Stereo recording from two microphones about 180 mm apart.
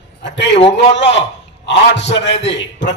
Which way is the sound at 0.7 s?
75° left (ahead or behind).